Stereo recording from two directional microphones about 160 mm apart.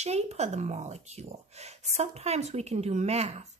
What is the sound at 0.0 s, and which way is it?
Speech, 45° right (ahead or behind).